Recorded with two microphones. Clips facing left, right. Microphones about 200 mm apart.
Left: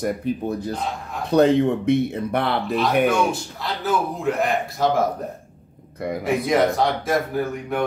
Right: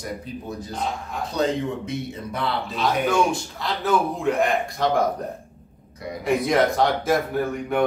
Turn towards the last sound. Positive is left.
turn(degrees=0)  # may be behind; listen again after turning